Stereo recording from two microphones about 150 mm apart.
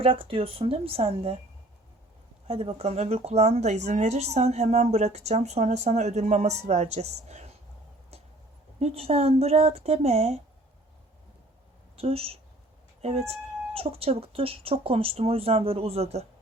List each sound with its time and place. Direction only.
0.0 s speech: 35° right (ahead or behind)
2.5 s speech: 40° right (ahead or behind)
8.8 s speech: 45° right (ahead or behind)
11.9 s speech: 40° right (ahead or behind)